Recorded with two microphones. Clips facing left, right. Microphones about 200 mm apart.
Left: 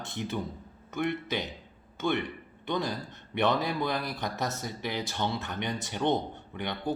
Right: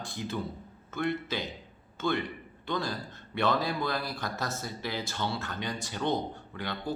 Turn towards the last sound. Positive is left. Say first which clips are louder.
# left 2 dB
turn(degrees=20)  # may be behind; listen again after turning